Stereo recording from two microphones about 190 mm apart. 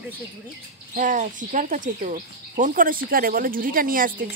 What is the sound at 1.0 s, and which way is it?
Speech, 45° right (ahead or behind).